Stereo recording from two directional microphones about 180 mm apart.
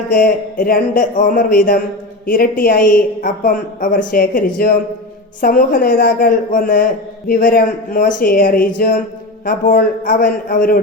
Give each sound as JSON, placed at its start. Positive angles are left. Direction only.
{"t": 0.1, "sound": "a woman's voice", "side_deg": 50}